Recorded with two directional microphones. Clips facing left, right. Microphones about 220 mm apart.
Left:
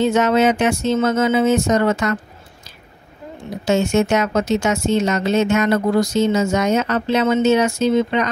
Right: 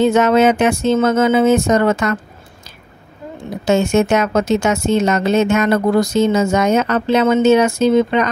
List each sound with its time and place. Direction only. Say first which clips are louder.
0.0 s speech: right 3 dB; 50° right (ahead or behind)
3.6 s speech: right 3 dB; 55° right (ahead or behind)